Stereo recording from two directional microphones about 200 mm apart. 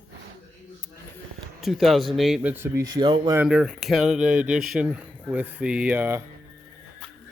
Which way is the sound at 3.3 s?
5° right (ahead or behind).